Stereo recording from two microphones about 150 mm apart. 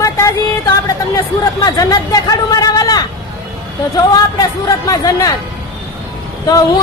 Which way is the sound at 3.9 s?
25° left (ahead or behind).